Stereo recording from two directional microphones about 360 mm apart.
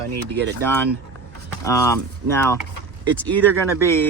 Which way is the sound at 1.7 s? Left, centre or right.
Centre.